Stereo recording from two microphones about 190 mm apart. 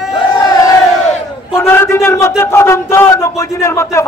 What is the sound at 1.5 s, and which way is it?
A man's voice, 15° left (ahead or behind).